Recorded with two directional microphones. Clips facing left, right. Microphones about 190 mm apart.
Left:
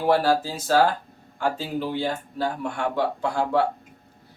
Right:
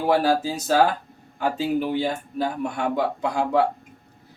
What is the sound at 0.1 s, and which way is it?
Speech, 15° right (ahead or behind).